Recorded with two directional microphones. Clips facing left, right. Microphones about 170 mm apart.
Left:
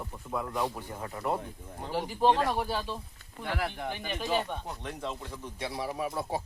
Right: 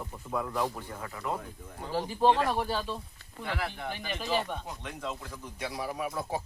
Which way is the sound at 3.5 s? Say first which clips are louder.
Left 2 dB; 50° left (ahead or behind).